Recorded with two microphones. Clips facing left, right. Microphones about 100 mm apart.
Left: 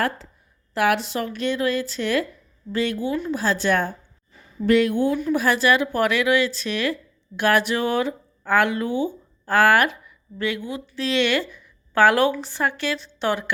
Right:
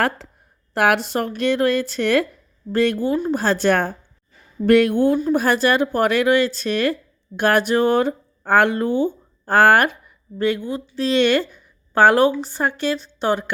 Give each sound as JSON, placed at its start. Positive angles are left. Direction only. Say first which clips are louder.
{"t": 0.7, "sound": "speech", "louder": "right 3 dB", "side_deg": -55}
{"t": 3.0, "sound": "speech", "louder": "right 4 dB", "side_deg": -45}
{"t": 3.4, "sound": "speech", "louder": "right 2 dB", "side_deg": -60}
{"t": 5.1, "sound": "a woman's voice", "louder": "right 3 dB", "side_deg": -45}